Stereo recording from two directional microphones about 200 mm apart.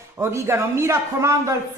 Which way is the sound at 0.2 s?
15° right (ahead or behind).